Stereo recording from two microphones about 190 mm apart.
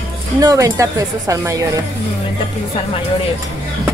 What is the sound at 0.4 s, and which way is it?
A woman's voice, 20° right (ahead or behind).